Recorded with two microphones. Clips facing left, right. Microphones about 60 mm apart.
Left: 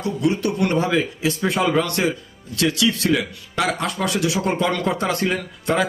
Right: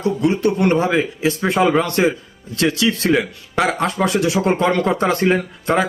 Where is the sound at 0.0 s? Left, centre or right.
Right.